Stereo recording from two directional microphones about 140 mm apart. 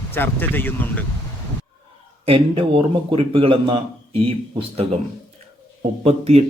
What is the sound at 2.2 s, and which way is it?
A man's voice, 40° right (ahead or behind).